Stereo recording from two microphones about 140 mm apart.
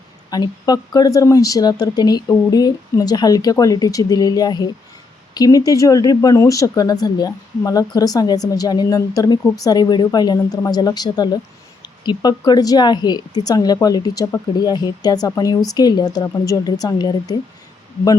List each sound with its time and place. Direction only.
0.3 s speech: 30° left (ahead or behind)